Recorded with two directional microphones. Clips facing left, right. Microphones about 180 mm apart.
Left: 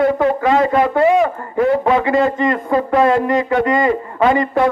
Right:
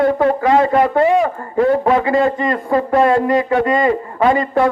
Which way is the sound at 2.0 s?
20° left (ahead or behind).